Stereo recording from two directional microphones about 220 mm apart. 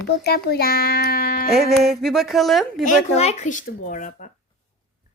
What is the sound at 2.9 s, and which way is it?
Speech, 30° left (ahead or behind).